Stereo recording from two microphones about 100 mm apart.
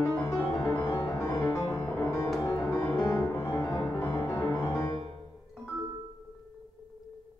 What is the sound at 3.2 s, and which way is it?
Music, 20° left (ahead or behind).